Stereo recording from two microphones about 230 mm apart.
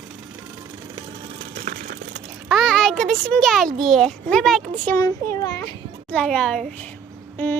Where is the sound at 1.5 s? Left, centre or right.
Right.